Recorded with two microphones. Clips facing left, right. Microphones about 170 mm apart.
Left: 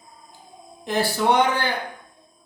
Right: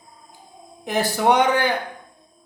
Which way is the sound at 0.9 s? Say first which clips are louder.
Right 2 dB; 20° right (ahead or behind).